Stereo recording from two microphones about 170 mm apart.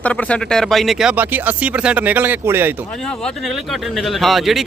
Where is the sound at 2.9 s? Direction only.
5° left (ahead or behind).